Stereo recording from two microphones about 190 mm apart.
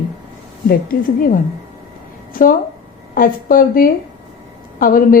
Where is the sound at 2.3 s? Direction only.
45° left (ahead or behind).